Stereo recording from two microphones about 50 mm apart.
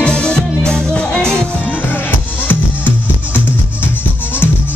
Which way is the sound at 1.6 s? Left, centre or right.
Left.